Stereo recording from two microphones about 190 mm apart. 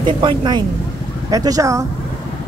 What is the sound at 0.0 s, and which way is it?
Speech, 25° right (ahead or behind).